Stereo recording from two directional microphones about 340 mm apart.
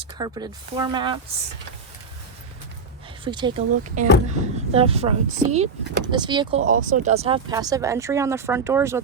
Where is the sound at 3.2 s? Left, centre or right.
Centre.